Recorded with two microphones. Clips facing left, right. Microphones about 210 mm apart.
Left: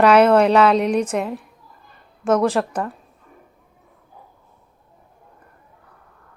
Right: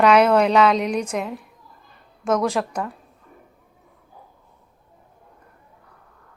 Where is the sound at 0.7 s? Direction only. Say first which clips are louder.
Left 4 dB; 35° left (ahead or behind).